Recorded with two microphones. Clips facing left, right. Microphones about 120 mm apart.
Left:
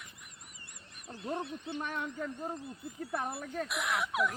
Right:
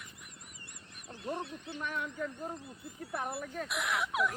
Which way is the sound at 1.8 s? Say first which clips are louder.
Right 2 dB; 30° left (ahead or behind).